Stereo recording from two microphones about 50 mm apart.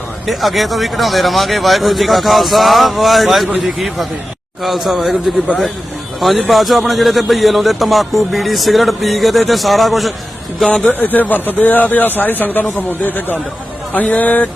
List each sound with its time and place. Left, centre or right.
0.3 s speech: centre
10.8 s speech: left
13.9 s speech: left